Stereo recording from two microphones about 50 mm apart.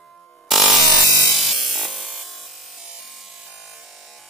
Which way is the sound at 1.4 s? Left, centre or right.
Centre.